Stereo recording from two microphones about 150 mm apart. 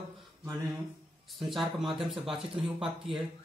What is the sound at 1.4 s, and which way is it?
Speech, centre (ahead or behind).